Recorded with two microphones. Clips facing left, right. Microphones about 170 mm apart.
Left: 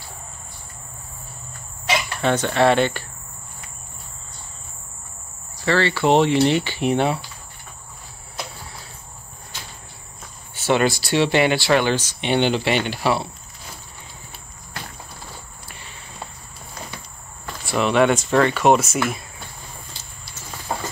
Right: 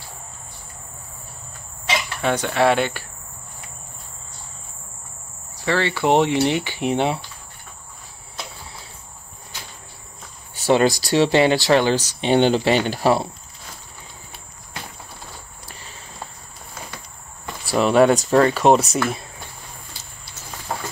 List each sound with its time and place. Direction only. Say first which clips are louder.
2.2 s speech: left 1 dB; 10° right (ahead or behind)
5.7 s speech: left 1 dB; 15° right (ahead or behind)
10.5 s speech: right 2 dB; 35° right (ahead or behind)
15.6 s cricket: right 1 dB; 40° right (ahead or behind)
17.6 s speech: right 3 dB; 35° right (ahead or behind)